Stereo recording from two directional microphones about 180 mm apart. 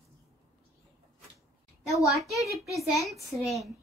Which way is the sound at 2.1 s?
Centre (ahead or behind).